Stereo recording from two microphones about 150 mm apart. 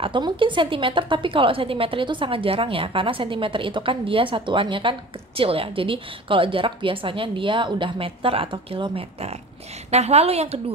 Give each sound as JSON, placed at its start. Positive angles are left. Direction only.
{"t": 0.0, "sound": "a woman's voice", "side_deg": -35}